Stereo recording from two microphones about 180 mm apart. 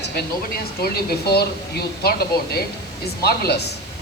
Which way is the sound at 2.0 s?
60° left (ahead or behind).